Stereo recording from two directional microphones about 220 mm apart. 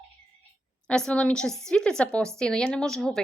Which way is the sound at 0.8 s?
5° left (ahead or behind).